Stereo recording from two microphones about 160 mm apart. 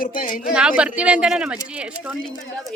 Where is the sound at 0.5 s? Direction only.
5° right (ahead or behind).